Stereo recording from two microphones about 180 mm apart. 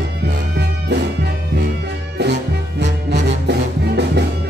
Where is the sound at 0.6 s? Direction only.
70° right (ahead or behind).